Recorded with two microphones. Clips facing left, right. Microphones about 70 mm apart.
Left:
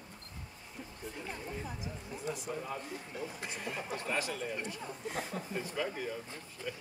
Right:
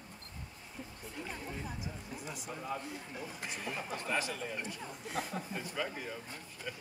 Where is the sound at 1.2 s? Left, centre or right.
Centre.